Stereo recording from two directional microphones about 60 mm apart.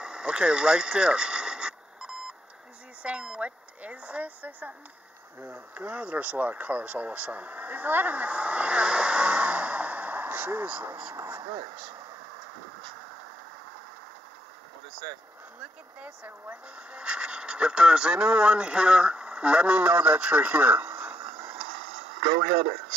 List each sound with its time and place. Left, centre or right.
0.0 s a sound: centre
3.0 s speech: centre
16.4 s speech: centre